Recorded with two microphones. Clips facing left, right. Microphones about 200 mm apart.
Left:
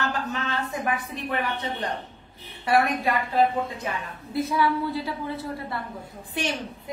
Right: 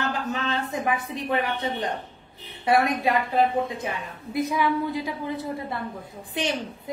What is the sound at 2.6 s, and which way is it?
A woman's voice, 20° right (ahead or behind).